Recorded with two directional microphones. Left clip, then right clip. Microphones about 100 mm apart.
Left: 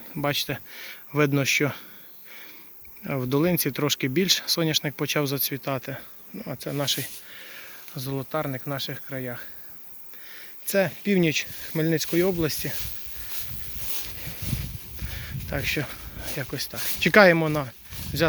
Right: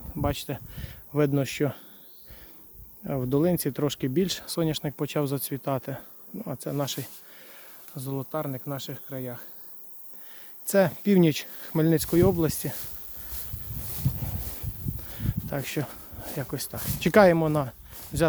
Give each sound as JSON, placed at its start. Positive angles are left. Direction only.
{"t": 0.2, "sound": "speech", "side_deg": -20}
{"t": 3.0, "sound": "speech", "side_deg": -15}
{"t": 5.3, "sound": "speech", "side_deg": -35}
{"t": 7.3, "sound": "speech", "side_deg": -15}
{"t": 10.7, "sound": "speech", "side_deg": -65}
{"t": 12.4, "sound": "speech", "side_deg": -40}
{"t": 15.4, "sound": "speech", "side_deg": -40}
{"t": 17.1, "sound": "speech", "side_deg": -20}
{"t": 17.5, "sound": "a sound", "side_deg": -40}